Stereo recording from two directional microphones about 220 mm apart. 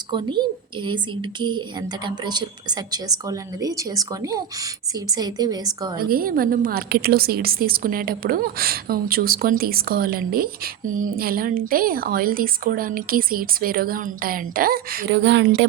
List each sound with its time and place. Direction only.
0.1 s speech: 20° right (ahead or behind)
6.0 s a woman's voice: 40° right (ahead or behind)